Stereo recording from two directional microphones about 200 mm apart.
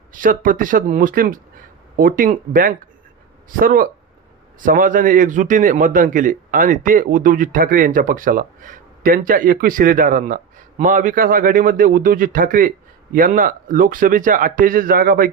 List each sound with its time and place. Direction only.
0.1 s a man's voice: 40° right (ahead or behind)